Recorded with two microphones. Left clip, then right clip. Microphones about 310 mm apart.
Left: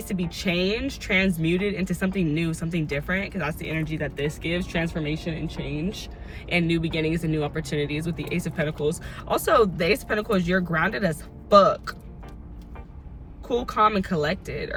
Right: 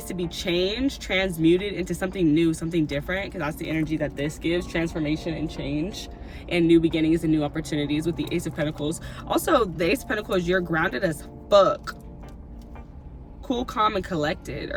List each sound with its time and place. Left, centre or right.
0.1 s speech: centre
13.7 s speech: centre